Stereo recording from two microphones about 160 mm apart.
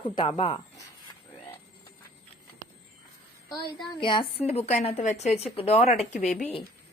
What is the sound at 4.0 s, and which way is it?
Speech, 30° left (ahead or behind).